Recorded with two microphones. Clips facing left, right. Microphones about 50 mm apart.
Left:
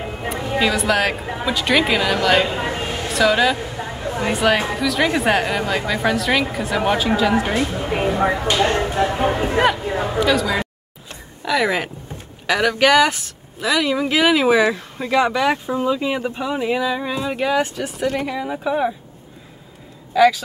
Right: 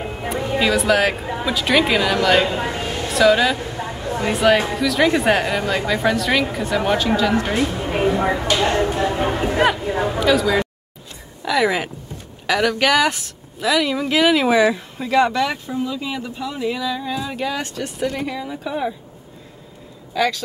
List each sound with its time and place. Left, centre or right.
0.3 s speech: centre
15.5 s speech: left
17.4 s speech: centre
18.4 s speech: left
18.7 s speech: centre
20.2 s speech: centre